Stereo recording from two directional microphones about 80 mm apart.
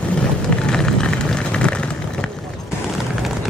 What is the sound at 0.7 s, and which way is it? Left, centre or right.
Vehicle, centre.